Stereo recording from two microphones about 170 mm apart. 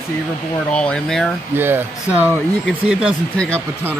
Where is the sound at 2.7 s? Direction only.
Centre (ahead or behind).